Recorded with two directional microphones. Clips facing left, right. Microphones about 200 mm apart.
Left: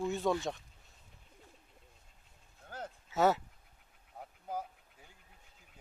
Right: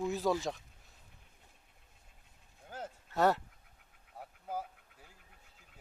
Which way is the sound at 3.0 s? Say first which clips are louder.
Left 1 dB; centre (ahead or behind).